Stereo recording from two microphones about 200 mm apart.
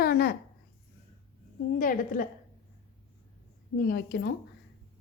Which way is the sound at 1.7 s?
45° left (ahead or behind).